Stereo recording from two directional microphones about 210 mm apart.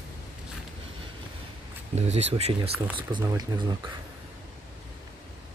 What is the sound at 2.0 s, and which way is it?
Speech, 30° right (ahead or behind).